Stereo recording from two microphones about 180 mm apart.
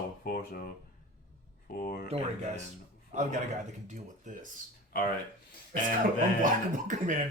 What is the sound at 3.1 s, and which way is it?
A man's voice, 45° right (ahead or behind).